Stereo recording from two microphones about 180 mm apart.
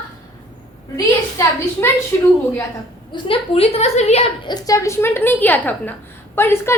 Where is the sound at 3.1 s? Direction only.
30° left (ahead or behind).